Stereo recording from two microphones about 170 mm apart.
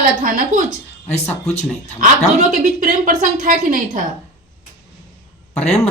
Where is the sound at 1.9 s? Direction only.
50° right (ahead or behind).